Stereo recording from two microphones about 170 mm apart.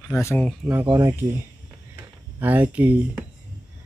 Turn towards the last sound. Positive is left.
turn(degrees=-10)  # may be behind; listen again after turning